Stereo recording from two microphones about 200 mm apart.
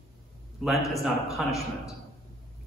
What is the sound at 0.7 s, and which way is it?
A man's voice, centre (ahead or behind).